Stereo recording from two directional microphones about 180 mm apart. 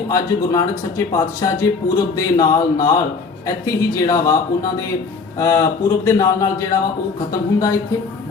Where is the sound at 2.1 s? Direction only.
20° left (ahead or behind).